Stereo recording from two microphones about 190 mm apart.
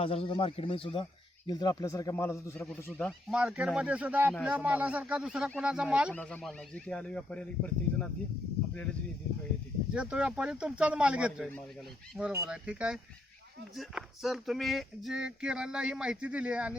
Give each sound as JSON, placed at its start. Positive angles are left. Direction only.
{"t": 0.0, "sound": "speech", "side_deg": 30}
{"t": 2.8, "sound": "speech", "side_deg": 5}
{"t": 6.1, "sound": "speech", "side_deg": 5}
{"t": 9.9, "sound": "speech", "side_deg": -5}